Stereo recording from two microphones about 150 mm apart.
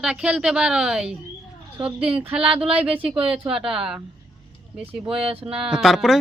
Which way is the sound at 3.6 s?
5° right (ahead or behind).